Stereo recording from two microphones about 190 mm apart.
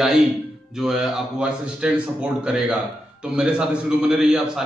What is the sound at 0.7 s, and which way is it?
Speech, centre (ahead or behind).